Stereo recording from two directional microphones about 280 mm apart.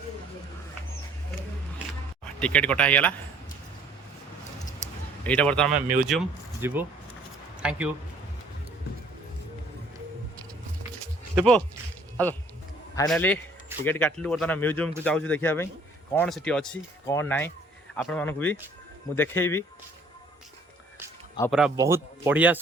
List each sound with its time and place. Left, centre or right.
2.2 s speech: centre
5.2 s speech: centre
5.7 s speech: right
6.1 s speech: centre
11.3 s speech: centre
21.4 s speech: centre
21.8 s speech: centre